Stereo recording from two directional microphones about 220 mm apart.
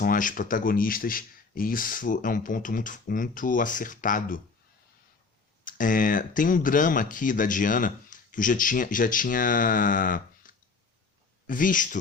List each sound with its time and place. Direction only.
0.0 s speech: 40° left (ahead or behind)
5.6 s speech: 40° left (ahead or behind)